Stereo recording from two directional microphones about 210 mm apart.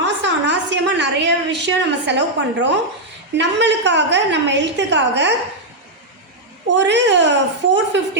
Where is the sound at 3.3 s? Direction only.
55° right (ahead or behind).